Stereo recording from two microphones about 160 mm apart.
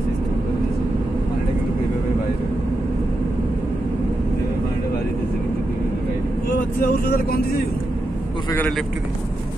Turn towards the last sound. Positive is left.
turn(degrees=70)  # may be behind; listen again after turning